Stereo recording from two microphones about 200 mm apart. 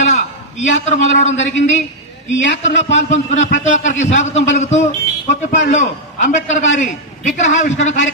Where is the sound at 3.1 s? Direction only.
40° left (ahead or behind).